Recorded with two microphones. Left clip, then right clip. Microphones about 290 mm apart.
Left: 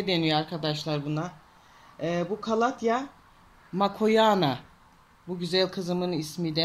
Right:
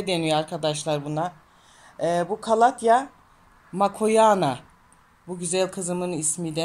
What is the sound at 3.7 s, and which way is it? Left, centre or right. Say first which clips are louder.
Speech: right 3 dB; centre.